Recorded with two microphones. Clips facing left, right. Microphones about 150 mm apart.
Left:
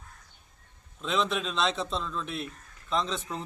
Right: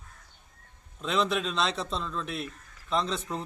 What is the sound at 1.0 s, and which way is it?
A man's voice, centre (ahead or behind).